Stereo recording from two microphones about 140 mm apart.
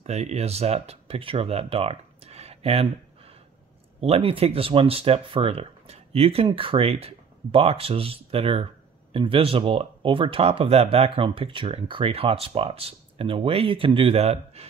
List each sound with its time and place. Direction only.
0.0 s speech: 50° right (ahead or behind)